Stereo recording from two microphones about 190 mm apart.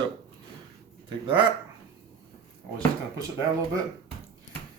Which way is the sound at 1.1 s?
25° right (ahead or behind).